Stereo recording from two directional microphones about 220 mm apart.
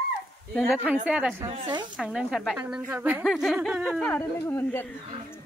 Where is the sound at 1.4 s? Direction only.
20° right (ahead or behind).